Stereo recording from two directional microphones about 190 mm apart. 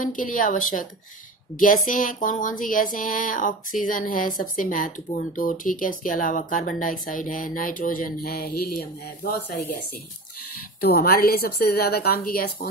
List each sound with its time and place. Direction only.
0.0 s speech: 45° left (ahead or behind)
10.8 s speech: 55° left (ahead or behind)